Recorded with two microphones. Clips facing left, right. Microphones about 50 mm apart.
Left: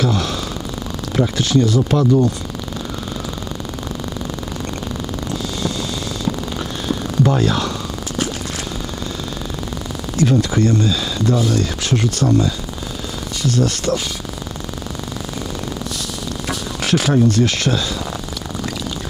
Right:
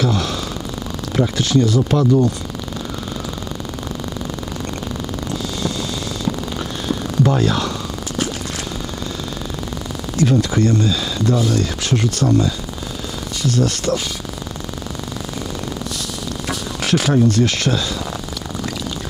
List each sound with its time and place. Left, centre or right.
0.0 s a sound: centre
1.1 s speech: left
7.2 s speech: left
10.2 s speech: left
16.4 s a sound: centre
17.3 s speech: centre